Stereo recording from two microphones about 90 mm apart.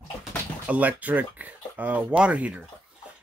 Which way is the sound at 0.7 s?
15° right (ahead or behind).